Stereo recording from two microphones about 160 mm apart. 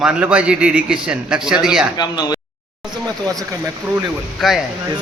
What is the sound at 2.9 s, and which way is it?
Speech, 25° right (ahead or behind).